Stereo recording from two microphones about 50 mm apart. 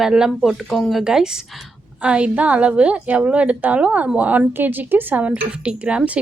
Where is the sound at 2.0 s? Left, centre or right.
Right.